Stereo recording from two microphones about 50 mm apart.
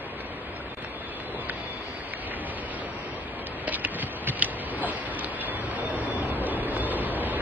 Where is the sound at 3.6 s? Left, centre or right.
Right.